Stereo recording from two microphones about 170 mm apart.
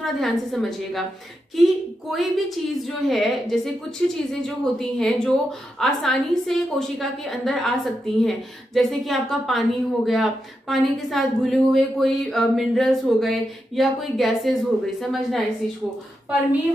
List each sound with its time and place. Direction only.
0.0 s a woman's voice: centre (ahead or behind)